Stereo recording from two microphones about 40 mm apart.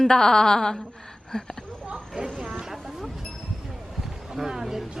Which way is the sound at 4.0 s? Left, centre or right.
Centre.